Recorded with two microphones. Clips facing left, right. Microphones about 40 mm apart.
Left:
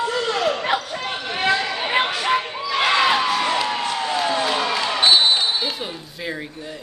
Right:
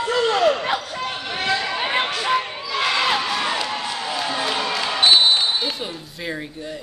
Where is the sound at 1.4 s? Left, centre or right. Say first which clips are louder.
Left 3 dB; centre.